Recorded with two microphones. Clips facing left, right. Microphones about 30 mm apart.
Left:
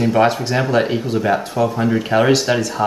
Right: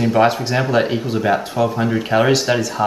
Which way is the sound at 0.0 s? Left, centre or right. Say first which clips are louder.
Even; centre.